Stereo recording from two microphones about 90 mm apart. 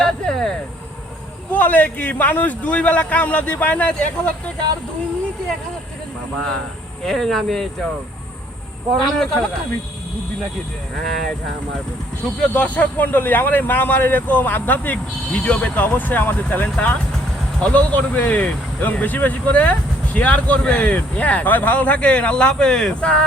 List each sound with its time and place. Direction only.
0.0 s vehicle: 5° left (ahead or behind)
1.5 s speech: 20° left (ahead or behind)
7.0 s speech: 5° left (ahead or behind)
8.9 s speech: 5° left (ahead or behind)
10.9 s speech: 5° left (ahead or behind)